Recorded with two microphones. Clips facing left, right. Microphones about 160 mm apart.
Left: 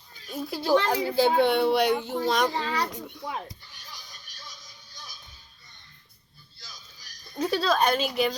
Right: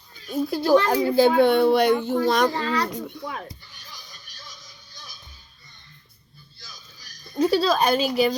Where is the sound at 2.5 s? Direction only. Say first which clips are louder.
Right 4 dB; 15° left (ahead or behind).